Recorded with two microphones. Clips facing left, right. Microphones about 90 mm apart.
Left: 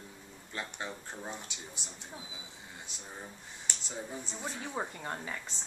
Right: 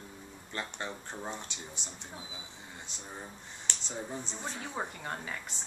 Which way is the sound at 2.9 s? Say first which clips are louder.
Right 2 dB; 5° left (ahead or behind).